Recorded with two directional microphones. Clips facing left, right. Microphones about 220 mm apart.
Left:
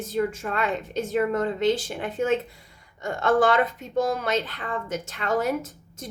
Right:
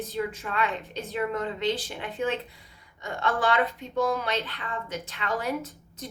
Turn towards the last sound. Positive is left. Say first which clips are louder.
# left 1 dB
turn(degrees=45)  # may be behind; listen again after turning